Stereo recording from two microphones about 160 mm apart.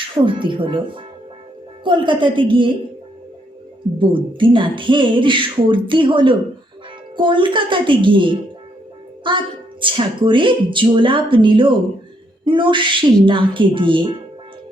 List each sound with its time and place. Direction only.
0.3 s speech: 30° right (ahead or behind)
3.9 s speech: 30° right (ahead or behind)